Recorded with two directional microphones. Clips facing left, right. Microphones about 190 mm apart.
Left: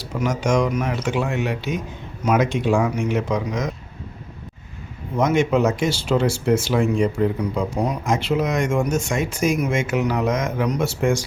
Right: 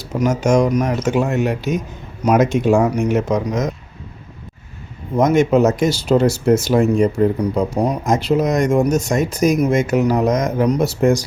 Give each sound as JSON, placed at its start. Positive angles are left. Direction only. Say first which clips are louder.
{"t": 0.0, "sound": "speech", "louder": "right 5 dB", "side_deg": -40}
{"t": 5.1, "sound": "speech", "louder": "right 5 dB", "side_deg": -45}